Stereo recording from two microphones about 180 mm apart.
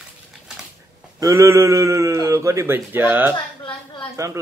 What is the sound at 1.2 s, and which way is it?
Speech, 15° right (ahead or behind).